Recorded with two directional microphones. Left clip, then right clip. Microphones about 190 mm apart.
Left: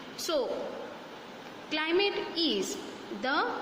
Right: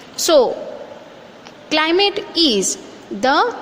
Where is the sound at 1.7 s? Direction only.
45° right (ahead or behind).